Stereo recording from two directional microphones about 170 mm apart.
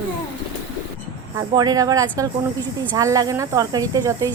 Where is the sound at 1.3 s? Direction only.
20° right (ahead or behind).